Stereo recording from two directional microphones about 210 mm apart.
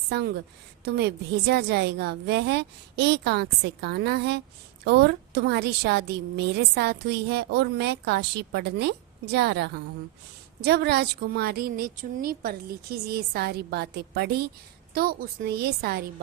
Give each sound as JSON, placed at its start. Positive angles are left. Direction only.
{"t": 0.1, "sound": "a woman's voice", "side_deg": -50}